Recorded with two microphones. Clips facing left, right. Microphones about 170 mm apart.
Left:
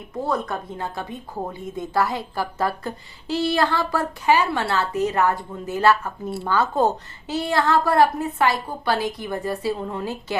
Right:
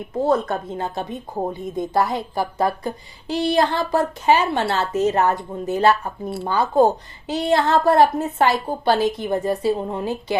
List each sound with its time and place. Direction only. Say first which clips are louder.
0.2 s a woman's voice: right 5 dB; 25° right (ahead or behind)